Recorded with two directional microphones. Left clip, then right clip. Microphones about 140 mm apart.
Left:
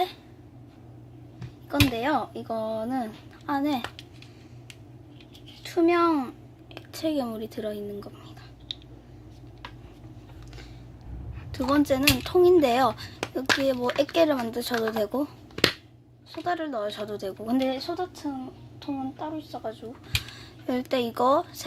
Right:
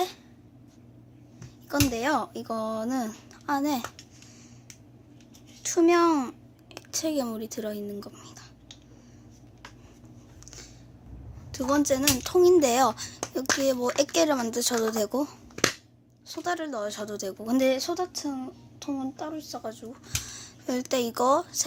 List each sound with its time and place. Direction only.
1.7 s speech: 25° right (ahead or behind)
5.6 s speech: 30° right (ahead or behind)
11.5 s speech: 15° right (ahead or behind)
16.4 s speech: 20° right (ahead or behind)
17.7 s a child's voice: 45° right (ahead or behind)
20.1 s speech: 15° right (ahead or behind)